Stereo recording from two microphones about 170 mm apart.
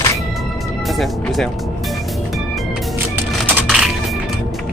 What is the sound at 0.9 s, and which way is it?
Speech, centre (ahead or behind).